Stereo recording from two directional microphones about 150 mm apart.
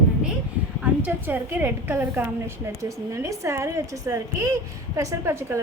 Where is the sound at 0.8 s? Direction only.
10° right (ahead or behind).